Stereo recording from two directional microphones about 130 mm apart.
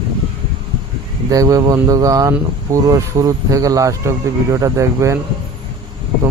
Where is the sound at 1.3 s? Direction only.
25° right (ahead or behind).